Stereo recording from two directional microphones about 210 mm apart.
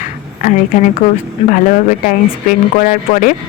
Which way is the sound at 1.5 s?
40° left (ahead or behind).